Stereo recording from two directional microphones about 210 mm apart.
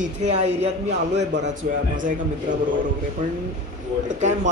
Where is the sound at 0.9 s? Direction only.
55° right (ahead or behind).